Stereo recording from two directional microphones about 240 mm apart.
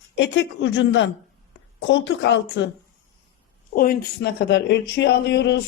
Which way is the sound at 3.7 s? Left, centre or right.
Left.